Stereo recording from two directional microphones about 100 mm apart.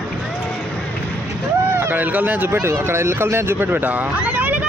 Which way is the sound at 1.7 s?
20° right (ahead or behind).